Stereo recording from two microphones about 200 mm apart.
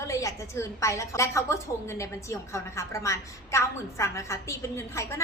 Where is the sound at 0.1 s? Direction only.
15° left (ahead or behind).